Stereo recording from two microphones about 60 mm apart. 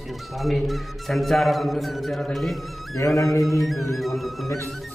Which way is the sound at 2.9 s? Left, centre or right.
Left.